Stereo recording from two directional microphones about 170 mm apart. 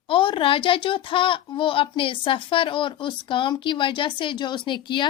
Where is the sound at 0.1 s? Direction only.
30° left (ahead or behind).